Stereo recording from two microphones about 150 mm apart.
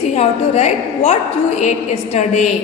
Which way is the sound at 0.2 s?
45° left (ahead or behind).